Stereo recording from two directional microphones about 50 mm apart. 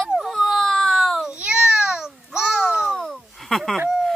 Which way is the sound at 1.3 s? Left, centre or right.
Centre.